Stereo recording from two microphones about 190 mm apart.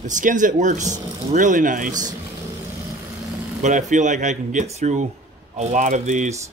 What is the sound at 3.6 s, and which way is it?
Speech, 40° right (ahead or behind).